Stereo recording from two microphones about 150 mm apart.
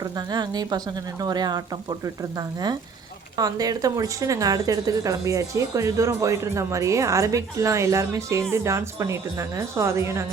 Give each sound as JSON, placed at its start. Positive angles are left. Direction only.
{"t": 0.0, "sound": "speech", "side_deg": -25}
{"t": 3.3, "sound": "speech", "side_deg": -25}